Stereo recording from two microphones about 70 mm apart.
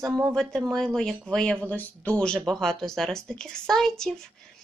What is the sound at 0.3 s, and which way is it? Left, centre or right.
Speech, centre.